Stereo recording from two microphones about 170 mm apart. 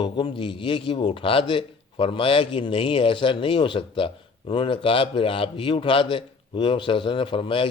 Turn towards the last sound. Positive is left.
turn(degrees=30)  # may be behind; listen again after turning